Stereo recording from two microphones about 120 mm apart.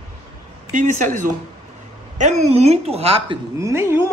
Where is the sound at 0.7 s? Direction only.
90° right.